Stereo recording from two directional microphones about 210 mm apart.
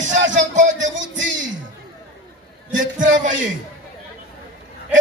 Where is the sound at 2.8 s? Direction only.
40° right (ahead or behind).